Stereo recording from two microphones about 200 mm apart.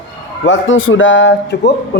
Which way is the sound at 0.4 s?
75° left (ahead or behind).